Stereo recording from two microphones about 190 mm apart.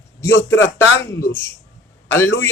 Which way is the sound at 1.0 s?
15° left (ahead or behind).